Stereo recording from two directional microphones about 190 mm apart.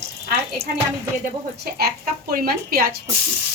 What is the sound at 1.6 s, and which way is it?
A woman's voice, 55° right (ahead or behind).